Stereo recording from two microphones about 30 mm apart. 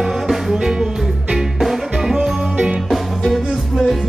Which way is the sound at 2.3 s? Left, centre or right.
Right.